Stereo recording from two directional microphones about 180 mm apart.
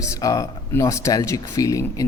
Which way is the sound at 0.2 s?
20° left (ahead or behind).